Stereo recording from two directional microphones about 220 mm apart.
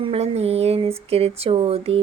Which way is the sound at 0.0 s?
25° right (ahead or behind).